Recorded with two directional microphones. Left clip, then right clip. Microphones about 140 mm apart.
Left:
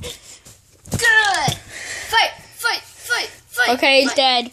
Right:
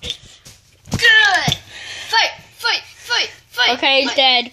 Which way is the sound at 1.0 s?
60° left (ahead or behind).